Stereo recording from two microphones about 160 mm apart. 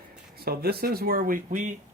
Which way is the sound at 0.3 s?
75° right (ahead or behind).